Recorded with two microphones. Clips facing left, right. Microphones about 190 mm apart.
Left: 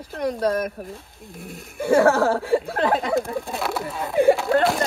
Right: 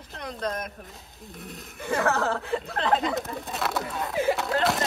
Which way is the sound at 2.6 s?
55° left (ahead or behind).